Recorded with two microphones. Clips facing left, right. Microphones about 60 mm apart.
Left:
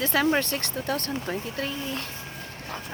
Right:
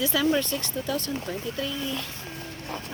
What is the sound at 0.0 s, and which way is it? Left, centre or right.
Speech, left.